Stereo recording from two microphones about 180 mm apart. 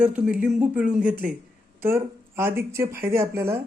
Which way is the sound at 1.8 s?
15° right (ahead or behind).